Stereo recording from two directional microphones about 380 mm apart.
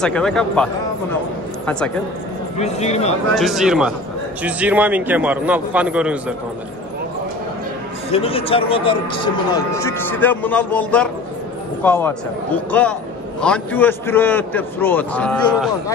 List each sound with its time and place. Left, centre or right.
0.0 s a man's voice: centre
2.6 s speech: centre
3.3 s a man's voice: centre
8.1 s a man's voice: centre